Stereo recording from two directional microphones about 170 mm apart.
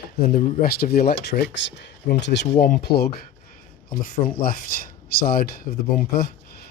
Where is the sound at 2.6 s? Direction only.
65° left (ahead or behind).